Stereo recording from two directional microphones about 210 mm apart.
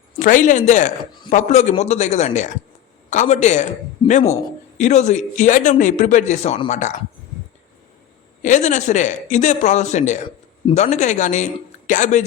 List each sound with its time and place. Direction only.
0.2 s a man's voice: 35° left (ahead or behind)
8.4 s a man's voice: 35° left (ahead or behind)